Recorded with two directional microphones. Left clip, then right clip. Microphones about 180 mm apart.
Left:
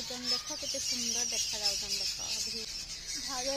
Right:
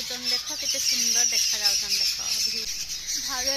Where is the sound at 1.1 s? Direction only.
15° right (ahead or behind).